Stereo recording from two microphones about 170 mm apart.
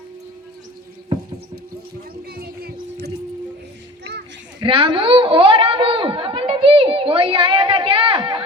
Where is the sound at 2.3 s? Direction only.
65° right (ahead or behind).